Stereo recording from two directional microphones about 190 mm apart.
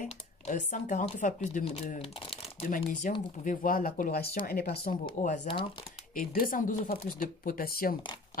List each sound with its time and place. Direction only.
0.0 s speech: 40° left (ahead or behind)
5.2 s speech: 40° left (ahead or behind)